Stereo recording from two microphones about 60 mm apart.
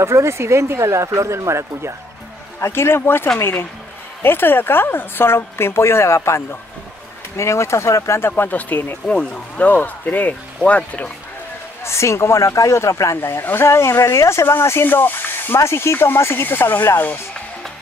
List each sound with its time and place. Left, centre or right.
0.0 s speech: right
2.6 s speech: left
9.0 s speech: centre
9.7 s speech: left
11.8 s speech: left
13.2 s speech: left
14.9 s speech: left